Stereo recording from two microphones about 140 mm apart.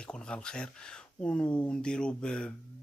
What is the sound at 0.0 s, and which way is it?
Speech, 5° left (ahead or behind).